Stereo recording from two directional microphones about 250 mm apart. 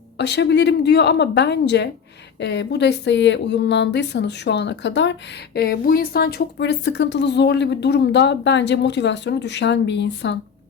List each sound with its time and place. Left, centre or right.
0.2 s speech: left